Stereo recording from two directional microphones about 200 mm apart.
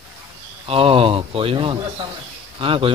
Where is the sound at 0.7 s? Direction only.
30° right (ahead or behind).